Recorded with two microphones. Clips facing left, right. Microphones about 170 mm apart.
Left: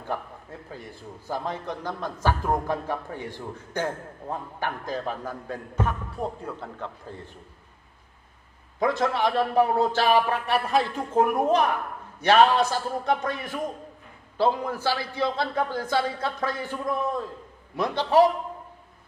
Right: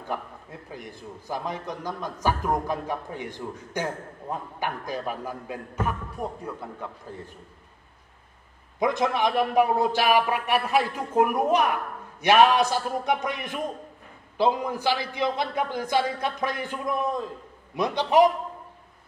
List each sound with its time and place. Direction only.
0.1 s a man's voice: 15° right (ahead or behind)
6.2 s speech: 30° left (ahead or behind)
8.7 s a man's voice: 15° right (ahead or behind)